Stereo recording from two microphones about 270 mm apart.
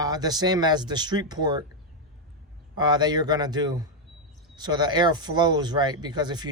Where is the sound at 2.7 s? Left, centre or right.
Centre.